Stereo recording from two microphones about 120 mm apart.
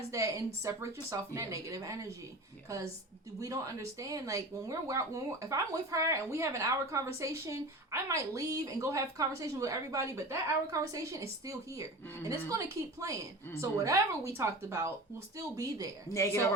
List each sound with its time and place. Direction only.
0.1 s speech: 25° right (ahead or behind)
16.1 s speech: 25° left (ahead or behind)